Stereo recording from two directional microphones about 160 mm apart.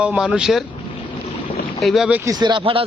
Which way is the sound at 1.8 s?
Centre (ahead or behind).